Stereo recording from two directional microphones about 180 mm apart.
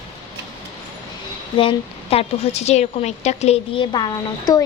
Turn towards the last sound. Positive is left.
turn(degrees=20)  # may be behind; listen again after turning